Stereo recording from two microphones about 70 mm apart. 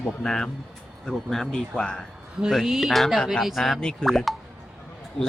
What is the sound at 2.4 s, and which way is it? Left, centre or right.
A woman's voice, centre.